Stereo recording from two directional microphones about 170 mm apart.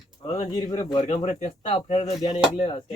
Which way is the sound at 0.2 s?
35° left (ahead or behind).